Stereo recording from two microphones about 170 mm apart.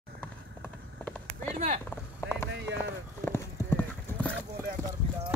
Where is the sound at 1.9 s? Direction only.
15° left (ahead or behind).